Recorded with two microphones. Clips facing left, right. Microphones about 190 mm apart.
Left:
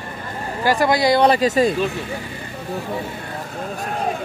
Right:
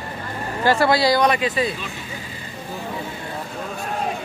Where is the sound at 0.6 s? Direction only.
15° left (ahead or behind); by 1.7 s 45° left (ahead or behind).